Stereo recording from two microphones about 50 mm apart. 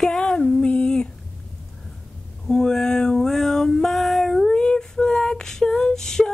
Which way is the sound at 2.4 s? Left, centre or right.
Centre.